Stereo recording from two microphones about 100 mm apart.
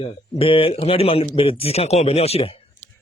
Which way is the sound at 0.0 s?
70° left (ahead or behind).